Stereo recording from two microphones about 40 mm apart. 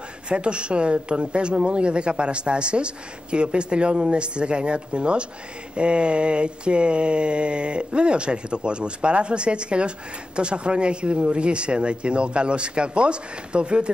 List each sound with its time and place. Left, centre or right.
0.3 s speech: right